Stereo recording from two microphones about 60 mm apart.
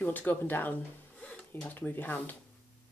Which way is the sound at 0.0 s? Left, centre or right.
Left.